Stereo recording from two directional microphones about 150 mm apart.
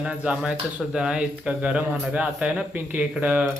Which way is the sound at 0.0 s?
5° right (ahead or behind).